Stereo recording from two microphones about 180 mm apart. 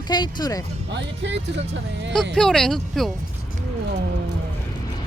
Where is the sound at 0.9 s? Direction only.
75° right (ahead or behind).